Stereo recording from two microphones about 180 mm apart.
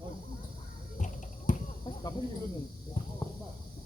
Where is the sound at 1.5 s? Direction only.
45° left (ahead or behind).